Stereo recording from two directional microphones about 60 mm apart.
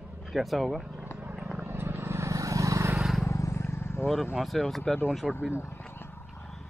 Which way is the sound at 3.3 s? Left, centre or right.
Left.